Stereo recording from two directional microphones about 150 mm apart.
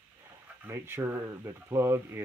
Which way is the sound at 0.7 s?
20° right (ahead or behind).